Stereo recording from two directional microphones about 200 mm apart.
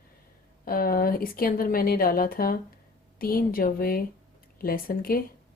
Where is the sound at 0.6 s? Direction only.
45° left (ahead or behind).